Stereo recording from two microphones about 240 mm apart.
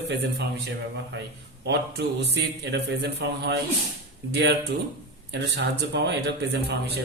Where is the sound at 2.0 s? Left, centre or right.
Right.